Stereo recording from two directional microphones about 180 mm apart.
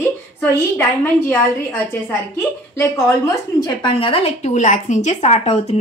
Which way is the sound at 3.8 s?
30° left (ahead or behind).